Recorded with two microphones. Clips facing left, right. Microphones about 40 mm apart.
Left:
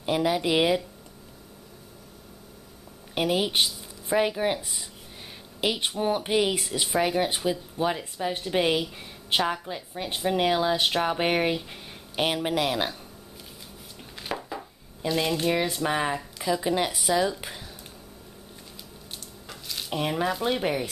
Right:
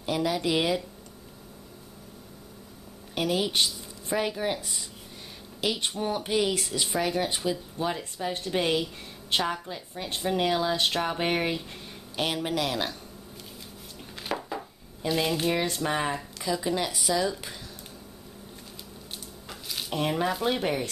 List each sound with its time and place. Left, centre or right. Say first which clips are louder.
0.0 s speech: left 3 dB; centre
3.2 s speech: left 2 dB; centre
14.2 s a sound: right 1 dB; centre
15.7 s speech: left 2 dB; centre
16.6 s speech: left 2 dB; centre
19.4 s a sound: even; centre
19.9 s speech: even; centre